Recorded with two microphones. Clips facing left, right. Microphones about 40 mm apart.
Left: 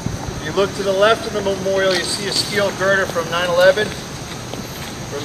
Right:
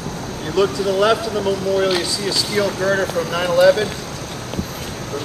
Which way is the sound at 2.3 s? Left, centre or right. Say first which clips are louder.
Left 1 dB; left.